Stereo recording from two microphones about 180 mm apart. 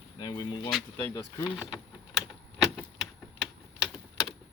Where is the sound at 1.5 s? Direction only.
5° right (ahead or behind).